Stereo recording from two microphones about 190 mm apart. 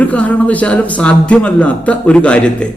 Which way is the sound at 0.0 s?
5° left (ahead or behind).